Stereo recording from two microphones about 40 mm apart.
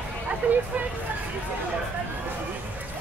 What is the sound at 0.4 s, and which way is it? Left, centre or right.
Speech, right.